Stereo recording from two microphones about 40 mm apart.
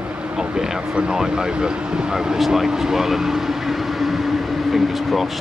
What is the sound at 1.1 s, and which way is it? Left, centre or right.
Speech, centre.